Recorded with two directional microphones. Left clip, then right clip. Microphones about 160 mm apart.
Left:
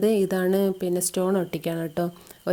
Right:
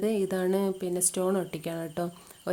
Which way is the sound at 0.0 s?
30° left (ahead or behind).